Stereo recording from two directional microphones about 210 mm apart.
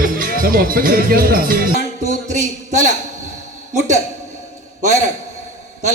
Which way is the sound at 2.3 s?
35° right (ahead or behind).